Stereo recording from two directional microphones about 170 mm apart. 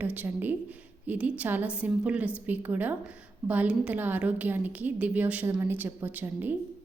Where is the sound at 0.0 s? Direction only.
10° right (ahead or behind).